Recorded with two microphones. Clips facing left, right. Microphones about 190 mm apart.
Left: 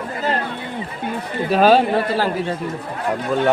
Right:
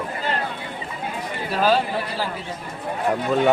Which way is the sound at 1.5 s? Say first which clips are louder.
Left 6 dB; 65° left (ahead or behind).